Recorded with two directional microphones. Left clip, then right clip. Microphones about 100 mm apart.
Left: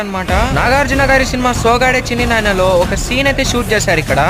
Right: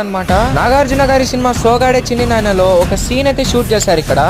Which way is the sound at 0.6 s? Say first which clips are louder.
Even; 30° right (ahead or behind).